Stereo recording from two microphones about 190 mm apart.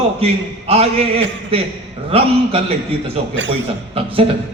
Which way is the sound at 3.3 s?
80° right.